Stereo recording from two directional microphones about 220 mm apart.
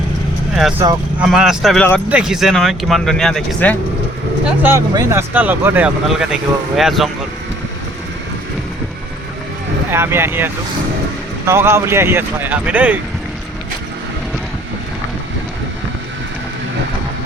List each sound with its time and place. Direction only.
0.8 s speech: 15° right (ahead or behind)
1.2 s speech: 5° right (ahead or behind)
4.4 s speech: 10° right (ahead or behind)
9.9 s speech: 10° right (ahead or behind)